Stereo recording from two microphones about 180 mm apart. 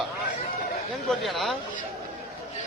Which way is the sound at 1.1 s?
Centre (ahead or behind).